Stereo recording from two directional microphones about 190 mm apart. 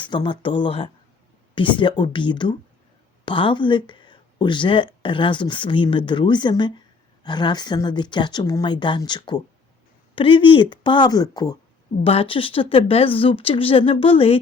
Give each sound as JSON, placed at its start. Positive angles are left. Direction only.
{"t": 0.0, "sound": "speech", "side_deg": 25}